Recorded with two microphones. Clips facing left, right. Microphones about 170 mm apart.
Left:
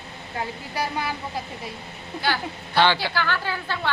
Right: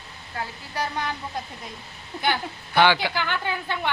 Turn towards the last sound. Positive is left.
turn(degrees=-20)  # may be behind; listen again after turning